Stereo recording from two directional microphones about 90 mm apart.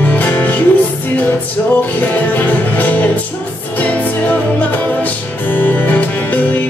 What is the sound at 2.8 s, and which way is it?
Music, 20° left (ahead or behind).